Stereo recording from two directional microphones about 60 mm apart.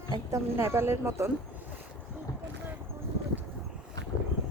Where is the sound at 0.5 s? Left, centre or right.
Right.